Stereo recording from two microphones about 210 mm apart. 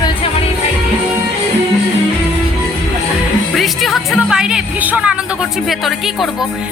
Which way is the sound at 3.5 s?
Centre (ahead or behind).